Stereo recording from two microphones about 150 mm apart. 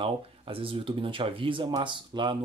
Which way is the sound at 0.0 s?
35° right (ahead or behind).